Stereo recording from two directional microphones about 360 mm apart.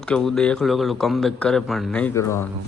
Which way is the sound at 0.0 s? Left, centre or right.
Centre.